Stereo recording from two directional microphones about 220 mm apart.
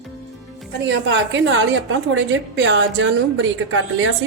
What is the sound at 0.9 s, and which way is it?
A woman's voice, 55° right (ahead or behind).